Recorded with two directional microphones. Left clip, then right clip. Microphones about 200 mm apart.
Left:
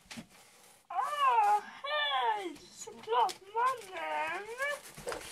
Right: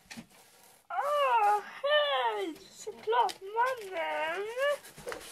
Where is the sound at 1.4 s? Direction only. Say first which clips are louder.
Right 2 dB; 50° right (ahead or behind).